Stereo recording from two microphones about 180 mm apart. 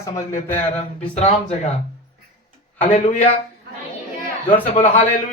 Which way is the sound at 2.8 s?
40° left (ahead or behind).